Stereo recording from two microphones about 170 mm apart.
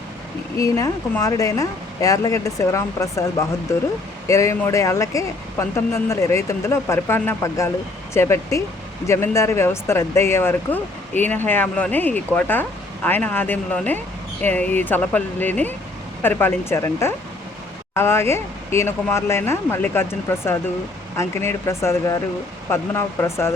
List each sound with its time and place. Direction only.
0.5 s speech: 20° left (ahead or behind)